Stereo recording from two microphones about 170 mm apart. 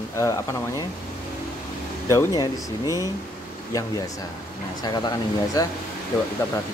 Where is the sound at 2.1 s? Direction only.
20° left (ahead or behind).